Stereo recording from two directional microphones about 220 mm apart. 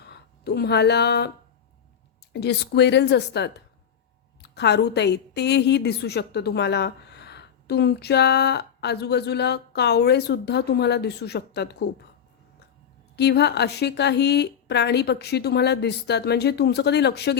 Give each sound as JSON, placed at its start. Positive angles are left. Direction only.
{"t": 0.0, "sound": "a sound", "side_deg": 50}
{"t": 2.3, "sound": "a woman's voice", "side_deg": 50}
{"t": 13.1, "sound": "a woman's voice", "side_deg": 50}